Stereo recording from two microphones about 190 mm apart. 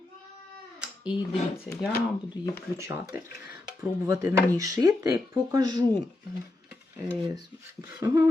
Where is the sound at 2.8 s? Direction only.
15° right (ahead or behind).